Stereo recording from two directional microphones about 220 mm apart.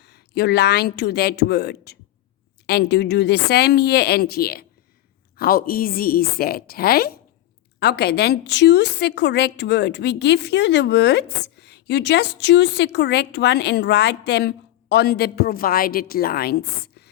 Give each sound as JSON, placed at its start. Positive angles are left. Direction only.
{"t": 0.0, "sound": "a woman's voice", "side_deg": 50}